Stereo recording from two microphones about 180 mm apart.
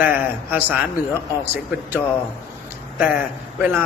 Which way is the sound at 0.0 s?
10° right (ahead or behind).